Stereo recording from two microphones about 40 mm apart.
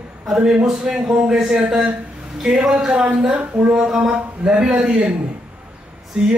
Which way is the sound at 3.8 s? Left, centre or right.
Right.